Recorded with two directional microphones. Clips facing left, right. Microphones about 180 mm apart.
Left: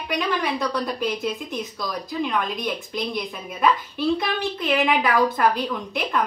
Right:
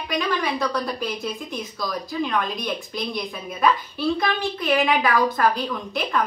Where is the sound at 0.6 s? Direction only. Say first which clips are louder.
Even; 20° left (ahead or behind).